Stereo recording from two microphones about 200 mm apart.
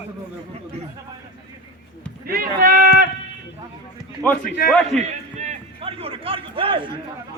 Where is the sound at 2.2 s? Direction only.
50° right (ahead or behind).